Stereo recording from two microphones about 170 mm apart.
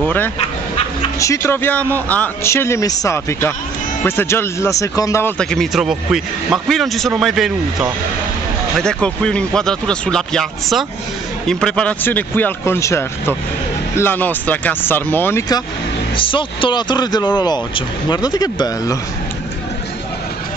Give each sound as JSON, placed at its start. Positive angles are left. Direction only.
{"t": 0.0, "sound": "speech", "side_deg": 10}
{"t": 5.4, "sound": "a man's voice", "side_deg": 5}
{"t": 16.2, "sound": "speech", "side_deg": 30}